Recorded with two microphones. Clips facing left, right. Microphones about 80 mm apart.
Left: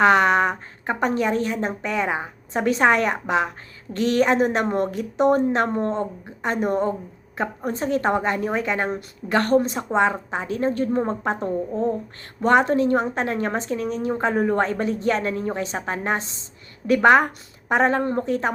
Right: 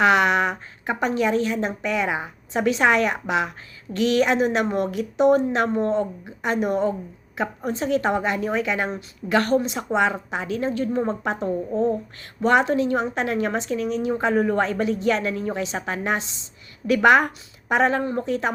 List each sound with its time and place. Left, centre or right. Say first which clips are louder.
0.0 s a woman's voice: left 2 dB; left
11.3 s a woman's voice: right 1 dB; centre
12.4 s a woman's voice: left 1 dB; left